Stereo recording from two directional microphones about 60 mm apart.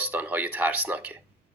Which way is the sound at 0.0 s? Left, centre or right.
Right.